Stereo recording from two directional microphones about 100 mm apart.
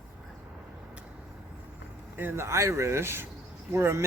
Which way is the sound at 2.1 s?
25° right (ahead or behind).